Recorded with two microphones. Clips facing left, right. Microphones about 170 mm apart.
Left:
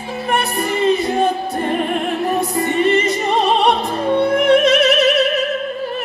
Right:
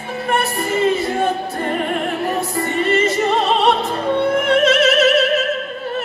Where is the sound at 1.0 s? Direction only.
15° left (ahead or behind).